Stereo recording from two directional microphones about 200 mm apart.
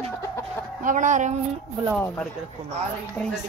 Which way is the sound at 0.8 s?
40° right (ahead or behind).